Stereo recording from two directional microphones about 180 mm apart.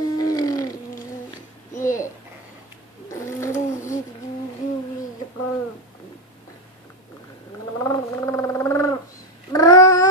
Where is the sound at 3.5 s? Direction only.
45° left (ahead or behind).